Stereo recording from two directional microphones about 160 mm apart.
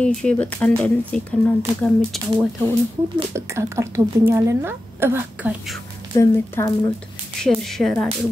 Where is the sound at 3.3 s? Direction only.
20° right (ahead or behind).